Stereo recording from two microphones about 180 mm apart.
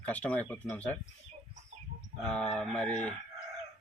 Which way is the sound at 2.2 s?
5° left (ahead or behind).